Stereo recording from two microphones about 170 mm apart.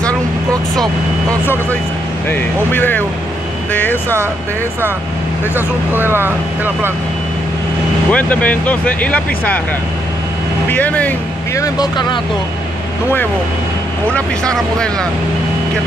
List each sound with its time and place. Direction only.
1.4 s speech: 10° left (ahead or behind)
5.9 s speech: 10° right (ahead or behind)
8.1 s speech: 10° left (ahead or behind)
10.7 s speech: 10° left (ahead or behind)
11.6 s speech: 25° left (ahead or behind)
14.1 s speech: 5° left (ahead or behind)